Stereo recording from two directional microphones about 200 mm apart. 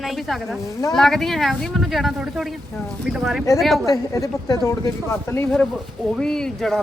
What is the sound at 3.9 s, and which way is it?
A woman's voice, 15° left (ahead or behind).